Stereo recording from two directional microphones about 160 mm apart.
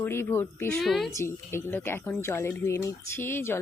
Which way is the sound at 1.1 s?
15° left (ahead or behind).